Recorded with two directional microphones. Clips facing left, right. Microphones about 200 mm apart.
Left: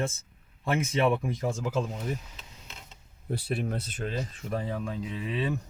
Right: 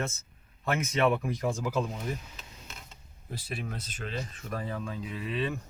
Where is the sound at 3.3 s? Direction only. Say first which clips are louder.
Left 7 dB; 60° left (ahead or behind).